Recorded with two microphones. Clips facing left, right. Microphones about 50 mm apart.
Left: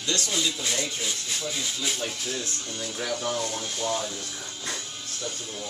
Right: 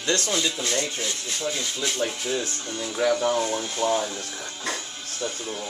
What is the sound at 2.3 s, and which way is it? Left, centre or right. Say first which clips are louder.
Speech: right 5 dB; right.